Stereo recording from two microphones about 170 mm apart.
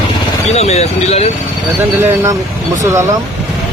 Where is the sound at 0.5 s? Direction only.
40° left (ahead or behind).